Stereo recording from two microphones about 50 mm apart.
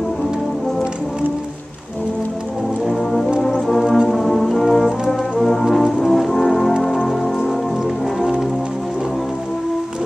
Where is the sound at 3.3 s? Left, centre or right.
Centre.